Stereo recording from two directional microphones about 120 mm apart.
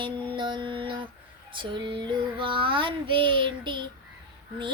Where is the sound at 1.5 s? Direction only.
45° right (ahead or behind).